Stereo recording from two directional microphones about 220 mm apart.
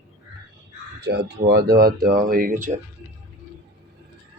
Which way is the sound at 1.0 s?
50° right (ahead or behind).